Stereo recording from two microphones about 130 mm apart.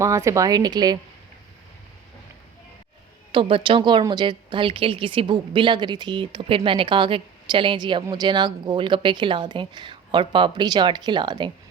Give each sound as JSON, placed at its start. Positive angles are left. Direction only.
{"t": 0.0, "sound": "speech", "side_deg": -25}
{"t": 3.3, "sound": "a woman's voice", "side_deg": -40}